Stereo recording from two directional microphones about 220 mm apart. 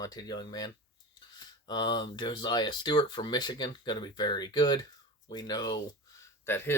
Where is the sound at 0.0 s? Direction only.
15° left (ahead or behind).